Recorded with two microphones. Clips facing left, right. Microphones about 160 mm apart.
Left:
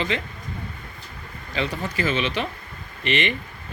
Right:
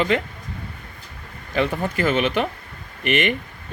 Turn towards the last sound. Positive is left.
turn(degrees=-50)  # may be behind; listen again after turning